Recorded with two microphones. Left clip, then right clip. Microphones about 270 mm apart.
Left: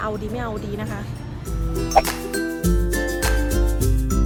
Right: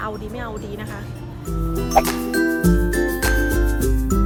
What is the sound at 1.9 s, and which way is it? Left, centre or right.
Music, centre.